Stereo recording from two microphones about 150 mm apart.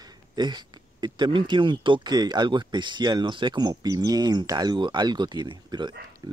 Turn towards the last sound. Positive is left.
turn(degrees=-30)  # may be behind; listen again after turning